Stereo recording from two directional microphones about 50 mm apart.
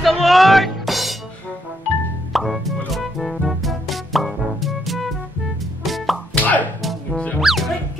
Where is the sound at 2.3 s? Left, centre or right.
Centre.